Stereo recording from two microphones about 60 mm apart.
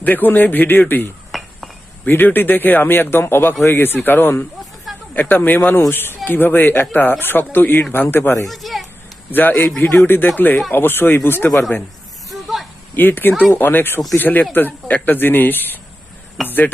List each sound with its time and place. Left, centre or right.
0.0 s speech: left
1.3 s glass: centre
2.0 s speech: left
8.4 s a child's voice: centre
9.3 s speech: left
12.3 s a sound: centre
13.0 s speech: left
16.4 s speech: centre